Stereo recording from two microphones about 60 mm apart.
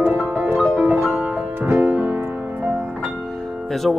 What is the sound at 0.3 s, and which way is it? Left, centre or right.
Music, right.